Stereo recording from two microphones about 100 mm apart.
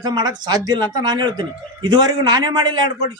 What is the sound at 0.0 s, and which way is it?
Speech, 45° right (ahead or behind).